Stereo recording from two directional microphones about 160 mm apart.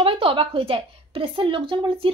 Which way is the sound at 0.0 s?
35° right (ahead or behind).